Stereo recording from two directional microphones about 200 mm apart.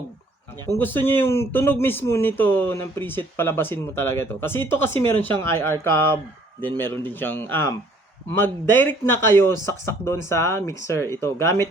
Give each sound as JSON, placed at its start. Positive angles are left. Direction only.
{"t": 0.7, "sound": "speech", "side_deg": 10}